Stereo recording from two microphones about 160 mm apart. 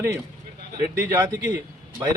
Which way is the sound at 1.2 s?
15° right (ahead or behind).